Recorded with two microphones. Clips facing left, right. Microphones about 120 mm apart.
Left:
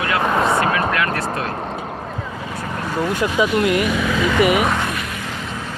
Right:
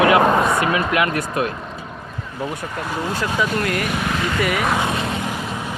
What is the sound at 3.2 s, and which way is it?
Speech, 20° left (ahead or behind).